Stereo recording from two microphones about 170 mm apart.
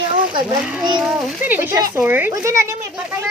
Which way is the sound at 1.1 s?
10° right (ahead or behind).